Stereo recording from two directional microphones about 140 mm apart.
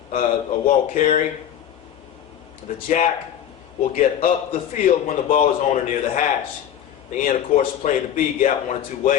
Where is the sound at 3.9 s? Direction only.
65° left (ahead or behind).